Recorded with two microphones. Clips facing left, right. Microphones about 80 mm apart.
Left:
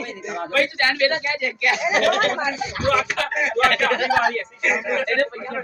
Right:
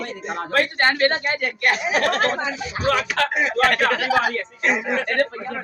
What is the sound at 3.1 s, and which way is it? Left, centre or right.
Speech, right.